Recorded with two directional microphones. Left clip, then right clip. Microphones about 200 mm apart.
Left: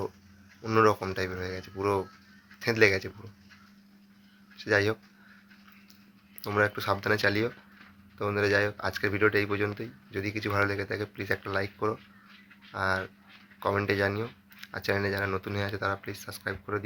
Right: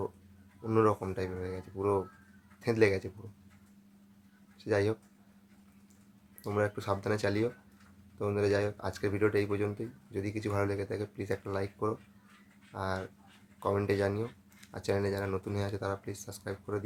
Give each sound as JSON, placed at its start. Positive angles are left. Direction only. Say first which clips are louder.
{"t": 0.6, "sound": "speech", "louder": "left 5 dB", "side_deg": -5}
{"t": 4.5, "sound": "speech", "louder": "left 4 dB", "side_deg": -5}
{"t": 6.6, "sound": "speech", "louder": "left 6 dB", "side_deg": -5}